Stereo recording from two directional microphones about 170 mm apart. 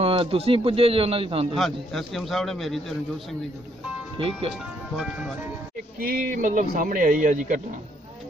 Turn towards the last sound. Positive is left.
turn(degrees=-50)  # may be behind; listen again after turning